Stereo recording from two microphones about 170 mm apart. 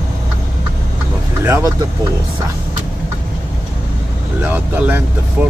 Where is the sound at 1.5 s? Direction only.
15° right (ahead or behind).